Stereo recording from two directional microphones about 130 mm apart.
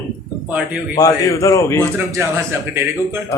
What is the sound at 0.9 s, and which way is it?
Speech, 25° left (ahead or behind).